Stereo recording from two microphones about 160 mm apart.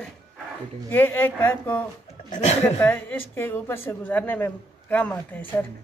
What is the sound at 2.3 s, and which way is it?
Speech, 45° left (ahead or behind).